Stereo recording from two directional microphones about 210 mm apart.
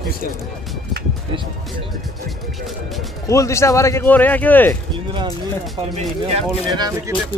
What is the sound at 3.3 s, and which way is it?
Speech, 15° left (ahead or behind).